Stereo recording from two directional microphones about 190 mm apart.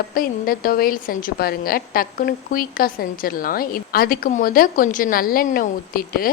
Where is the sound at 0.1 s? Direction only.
50° left (ahead or behind).